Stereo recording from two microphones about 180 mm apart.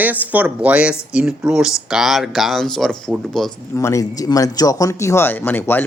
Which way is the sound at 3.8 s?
15° left (ahead or behind).